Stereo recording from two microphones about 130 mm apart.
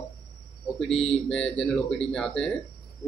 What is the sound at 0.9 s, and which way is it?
Mantra, 45° left (ahead or behind).